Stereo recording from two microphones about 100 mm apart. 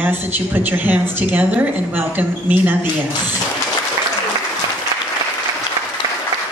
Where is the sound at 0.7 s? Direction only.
20° right (ahead or behind).